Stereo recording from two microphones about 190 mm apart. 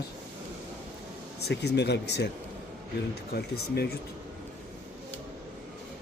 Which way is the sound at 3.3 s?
55° left (ahead or behind).